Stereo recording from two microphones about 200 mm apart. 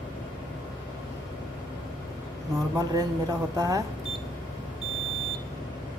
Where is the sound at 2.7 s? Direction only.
15° right (ahead or behind).